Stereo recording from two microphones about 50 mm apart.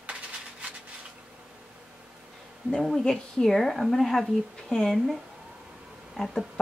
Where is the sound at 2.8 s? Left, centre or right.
Centre.